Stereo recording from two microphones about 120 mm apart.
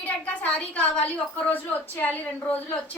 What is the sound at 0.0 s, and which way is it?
A woman's voice, 10° left (ahead or behind).